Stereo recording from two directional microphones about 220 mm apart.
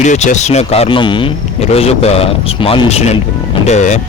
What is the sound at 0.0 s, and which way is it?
Speech, 35° left (ahead or behind).